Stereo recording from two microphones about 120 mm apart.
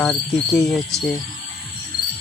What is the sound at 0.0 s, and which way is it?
Cricket, 5° left (ahead or behind).